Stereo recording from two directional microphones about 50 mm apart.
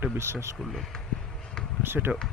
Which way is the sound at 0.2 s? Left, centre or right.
Right.